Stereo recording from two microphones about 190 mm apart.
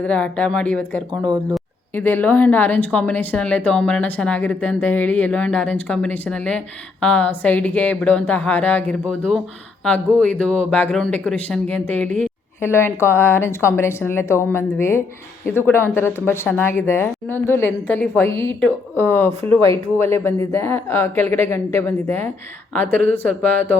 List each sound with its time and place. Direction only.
0.0 s speech: 5° left (ahead or behind)
1.1 s speech: 20° right (ahead or behind)
1.9 s speech: 10° left (ahead or behind)